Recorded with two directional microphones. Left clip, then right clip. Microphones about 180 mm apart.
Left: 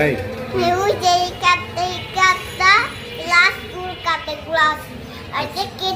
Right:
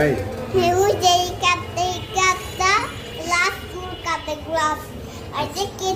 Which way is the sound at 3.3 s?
20° right (ahead or behind).